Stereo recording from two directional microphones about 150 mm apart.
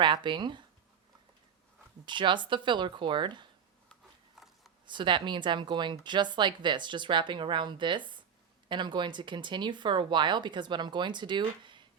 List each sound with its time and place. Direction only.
0.0 s speech: 30° right (ahead or behind)
2.0 s speech: 30° right (ahead or behind)
4.9 s speech: 30° right (ahead or behind)